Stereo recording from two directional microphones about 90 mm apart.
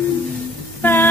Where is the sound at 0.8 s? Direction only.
25° left (ahead or behind).